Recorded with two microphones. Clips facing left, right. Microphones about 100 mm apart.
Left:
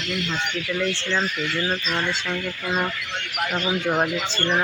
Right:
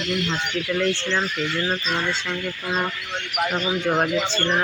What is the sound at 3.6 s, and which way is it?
Speech, 5° left (ahead or behind).